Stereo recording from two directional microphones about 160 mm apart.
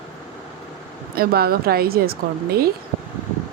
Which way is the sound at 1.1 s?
70° right (ahead or behind).